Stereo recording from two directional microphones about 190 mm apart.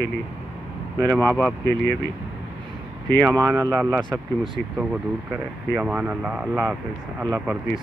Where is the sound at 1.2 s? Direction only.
5° left (ahead or behind).